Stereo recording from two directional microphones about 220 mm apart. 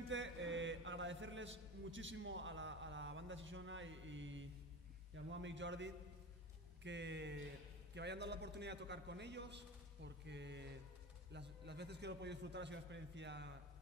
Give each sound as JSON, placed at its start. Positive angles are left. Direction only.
{"t": 0.1, "sound": "a man's voice", "side_deg": -60}